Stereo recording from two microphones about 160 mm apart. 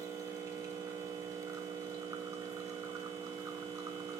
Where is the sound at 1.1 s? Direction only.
20° right (ahead or behind).